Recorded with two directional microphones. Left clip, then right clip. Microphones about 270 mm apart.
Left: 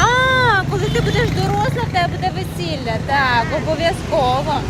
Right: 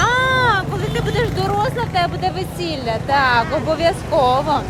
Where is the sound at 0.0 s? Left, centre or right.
Centre.